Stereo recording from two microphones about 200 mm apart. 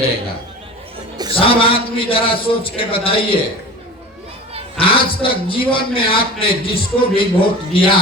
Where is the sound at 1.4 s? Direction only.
25° left (ahead or behind).